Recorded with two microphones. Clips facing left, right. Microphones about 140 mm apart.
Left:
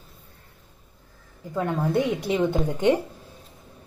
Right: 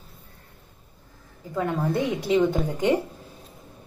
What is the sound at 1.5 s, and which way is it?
A woman's voice, 10° left (ahead or behind).